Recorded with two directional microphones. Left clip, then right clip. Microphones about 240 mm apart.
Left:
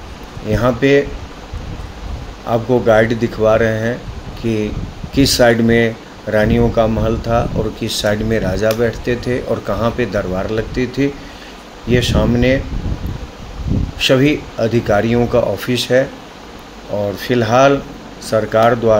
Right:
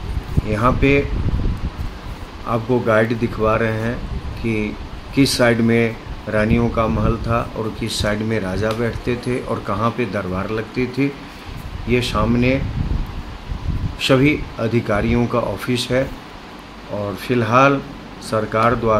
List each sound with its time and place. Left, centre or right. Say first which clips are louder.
0.5 s speech: left 3 dB; centre
2.5 s speech: left 5 dB; centre
5.1 s speech: left 4 dB; centre
14.0 s speech: left 3 dB; centre
17.2 s speech: left 2 dB; centre